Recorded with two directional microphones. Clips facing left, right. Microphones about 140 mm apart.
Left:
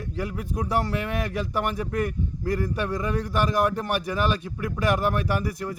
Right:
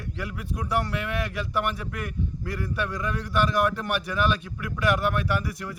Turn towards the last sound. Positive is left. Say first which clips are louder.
# left 2 dB
turn(degrees=35)  # may be behind; listen again after turning